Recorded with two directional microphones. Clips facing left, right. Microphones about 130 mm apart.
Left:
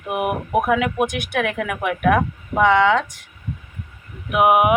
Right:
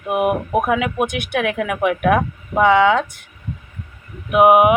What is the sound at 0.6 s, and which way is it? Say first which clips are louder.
Speech: left 2 dB; 5° right (ahead or behind).